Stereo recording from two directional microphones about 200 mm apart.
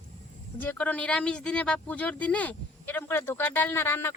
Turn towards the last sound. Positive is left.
turn(degrees=10)  # may be behind; listen again after turning